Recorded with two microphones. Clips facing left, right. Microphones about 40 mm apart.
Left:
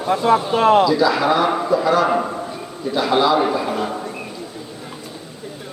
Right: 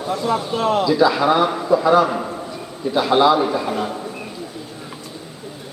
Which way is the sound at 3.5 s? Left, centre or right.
Centre.